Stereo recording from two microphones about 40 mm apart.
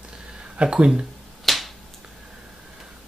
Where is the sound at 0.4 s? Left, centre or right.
Right.